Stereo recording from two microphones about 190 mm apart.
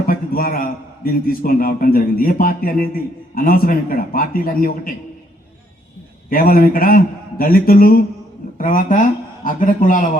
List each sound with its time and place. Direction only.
0.0 s a man's voice: 50° left (ahead or behind)
6.3 s a man's voice: 50° left (ahead or behind)